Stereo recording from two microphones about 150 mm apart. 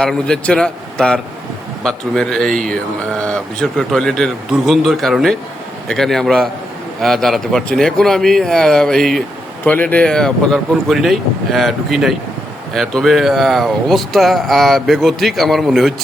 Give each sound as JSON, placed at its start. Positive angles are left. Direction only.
{"t": 0.0, "sound": "speech", "side_deg": 5}